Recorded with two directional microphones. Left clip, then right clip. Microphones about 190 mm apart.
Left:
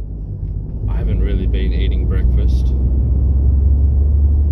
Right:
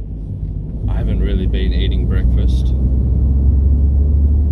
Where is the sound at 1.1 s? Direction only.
65° right (ahead or behind).